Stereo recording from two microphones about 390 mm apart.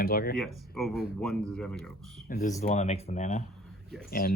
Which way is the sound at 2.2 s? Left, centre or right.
Left.